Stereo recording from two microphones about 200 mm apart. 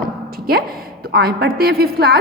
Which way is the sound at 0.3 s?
50° right (ahead or behind).